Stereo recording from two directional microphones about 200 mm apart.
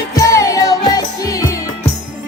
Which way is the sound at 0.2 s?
15° left (ahead or behind).